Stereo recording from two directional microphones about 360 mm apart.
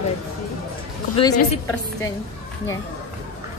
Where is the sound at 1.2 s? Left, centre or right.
Centre.